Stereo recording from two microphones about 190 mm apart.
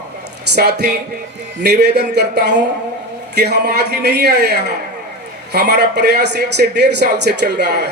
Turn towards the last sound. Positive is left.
turn(degrees=-60)  # may be behind; listen again after turning